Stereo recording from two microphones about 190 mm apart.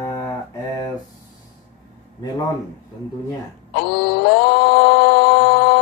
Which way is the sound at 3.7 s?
60° left (ahead or behind).